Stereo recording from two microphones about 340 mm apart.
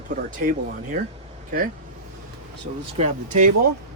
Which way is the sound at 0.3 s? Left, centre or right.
Right.